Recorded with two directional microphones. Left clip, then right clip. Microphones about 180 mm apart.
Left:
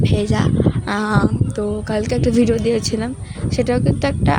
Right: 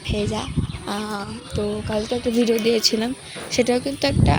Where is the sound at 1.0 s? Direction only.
45° left (ahead or behind).